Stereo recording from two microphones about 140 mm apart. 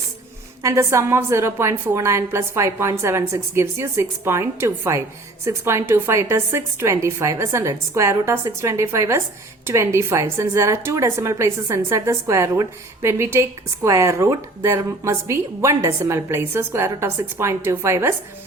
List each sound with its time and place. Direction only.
0.6 s a woman's voice: 20° right (ahead or behind)